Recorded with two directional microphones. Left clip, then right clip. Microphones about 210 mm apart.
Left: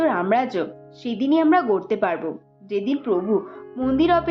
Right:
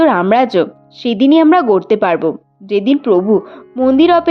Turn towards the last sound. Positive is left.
turn(degrees=-40)  # may be behind; listen again after turning